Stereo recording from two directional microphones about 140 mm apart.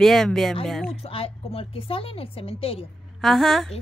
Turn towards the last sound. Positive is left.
turn(degrees=0)  # may be behind; listen again after turning